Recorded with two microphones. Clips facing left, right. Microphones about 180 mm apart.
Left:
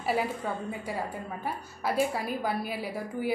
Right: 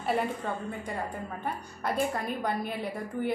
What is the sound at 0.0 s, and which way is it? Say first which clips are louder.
A woman's voice: even; 5° left (ahead or behind).